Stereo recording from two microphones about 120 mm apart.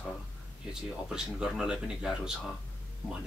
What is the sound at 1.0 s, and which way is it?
A man's voice, 5° right (ahead or behind).